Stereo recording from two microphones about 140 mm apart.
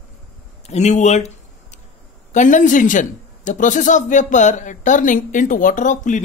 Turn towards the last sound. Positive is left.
turn(degrees=60)  # may be behind; listen again after turning